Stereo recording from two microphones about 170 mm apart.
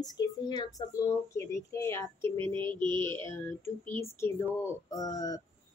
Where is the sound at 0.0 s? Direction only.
25° left (ahead or behind).